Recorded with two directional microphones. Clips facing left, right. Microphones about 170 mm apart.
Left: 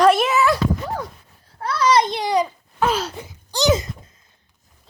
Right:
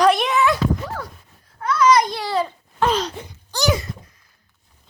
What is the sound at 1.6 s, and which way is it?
Babbling, 30° left (ahead or behind).